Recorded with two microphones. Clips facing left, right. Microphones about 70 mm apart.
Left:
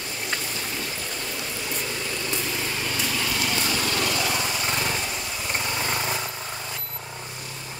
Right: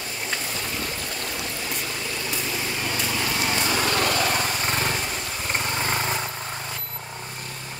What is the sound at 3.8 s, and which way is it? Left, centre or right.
Lawn mower, right.